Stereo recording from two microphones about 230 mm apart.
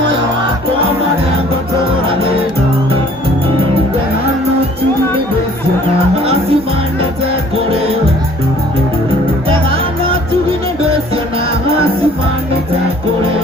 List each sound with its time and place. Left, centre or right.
6.2 s music: right